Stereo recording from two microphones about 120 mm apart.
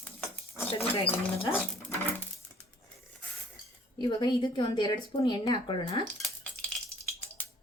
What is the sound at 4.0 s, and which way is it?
Speech, 40° left (ahead or behind).